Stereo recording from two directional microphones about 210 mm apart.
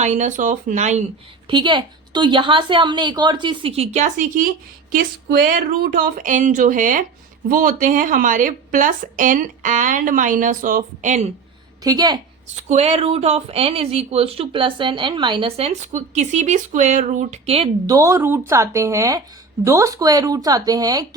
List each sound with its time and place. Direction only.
0.0 s speech: 35° right (ahead or behind)
1.5 s speech: 20° right (ahead or behind)
11.8 s speech: 20° right (ahead or behind)
12.6 s speech: 30° right (ahead or behind)
17.9 s speech: 15° right (ahead or behind)